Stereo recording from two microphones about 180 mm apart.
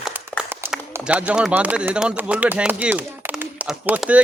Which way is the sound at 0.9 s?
5° right (ahead or behind).